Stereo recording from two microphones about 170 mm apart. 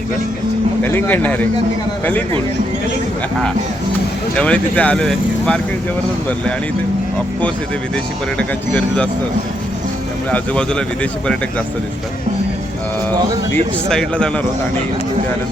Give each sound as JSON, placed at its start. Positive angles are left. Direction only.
{"t": 0.8, "sound": "speech", "side_deg": 10}
{"t": 4.4, "sound": "speech", "side_deg": 5}
{"t": 8.4, "sound": "speech", "side_deg": 5}
{"t": 10.3, "sound": "speech", "side_deg": 5}
{"t": 13.5, "sound": "speech", "side_deg": 5}